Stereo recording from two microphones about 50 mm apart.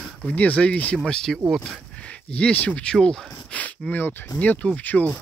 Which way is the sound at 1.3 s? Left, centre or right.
Centre.